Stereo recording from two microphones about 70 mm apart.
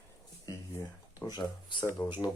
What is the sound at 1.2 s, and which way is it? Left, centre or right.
Speech, left.